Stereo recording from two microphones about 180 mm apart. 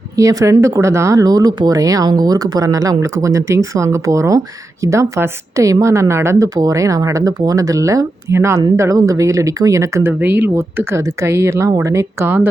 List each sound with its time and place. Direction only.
0.2 s speech: 20° right (ahead or behind)